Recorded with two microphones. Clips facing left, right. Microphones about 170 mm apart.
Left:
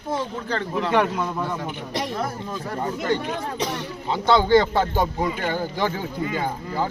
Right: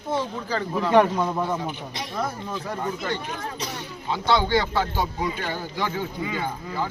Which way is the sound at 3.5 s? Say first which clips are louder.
Left 6 dB; 75° left (ahead or behind).